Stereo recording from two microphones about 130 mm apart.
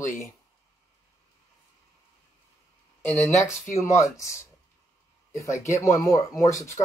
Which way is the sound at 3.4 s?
20° left (ahead or behind).